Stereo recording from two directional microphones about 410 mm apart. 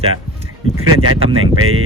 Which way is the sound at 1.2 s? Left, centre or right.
Centre.